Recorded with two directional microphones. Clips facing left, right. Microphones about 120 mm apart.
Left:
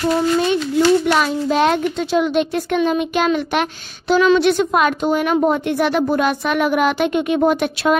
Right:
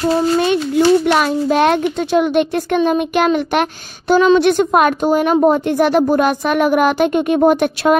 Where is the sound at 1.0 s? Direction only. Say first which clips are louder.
Right 3 dB; 55° right (ahead or behind).